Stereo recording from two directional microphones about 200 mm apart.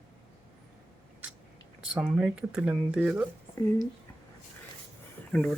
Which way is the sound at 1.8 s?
5° right (ahead or behind).